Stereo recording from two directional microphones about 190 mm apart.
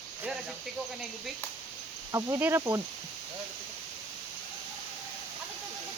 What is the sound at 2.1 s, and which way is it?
Speech, 10° right (ahead or behind).